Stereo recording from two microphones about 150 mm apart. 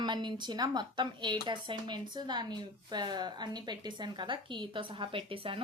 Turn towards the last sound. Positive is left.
turn(degrees=-35)  # may be behind; listen again after turning